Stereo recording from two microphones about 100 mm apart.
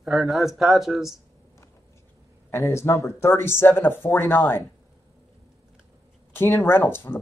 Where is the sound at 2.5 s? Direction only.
25° left (ahead or behind).